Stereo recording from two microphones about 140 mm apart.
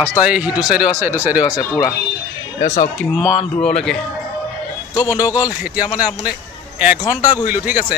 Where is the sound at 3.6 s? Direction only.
5° left (ahead or behind).